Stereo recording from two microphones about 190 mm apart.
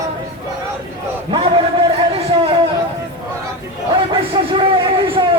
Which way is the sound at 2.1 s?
30° right (ahead or behind).